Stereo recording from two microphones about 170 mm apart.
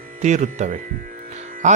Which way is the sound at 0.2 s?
45° right (ahead or behind).